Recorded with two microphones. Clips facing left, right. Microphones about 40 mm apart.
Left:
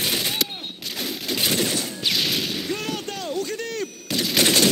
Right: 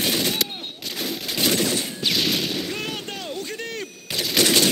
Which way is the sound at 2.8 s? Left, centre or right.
Right.